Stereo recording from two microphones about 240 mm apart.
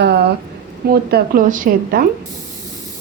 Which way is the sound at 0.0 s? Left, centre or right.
Right.